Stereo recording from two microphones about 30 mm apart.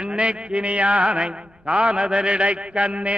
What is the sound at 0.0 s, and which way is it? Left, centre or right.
Mantra, right.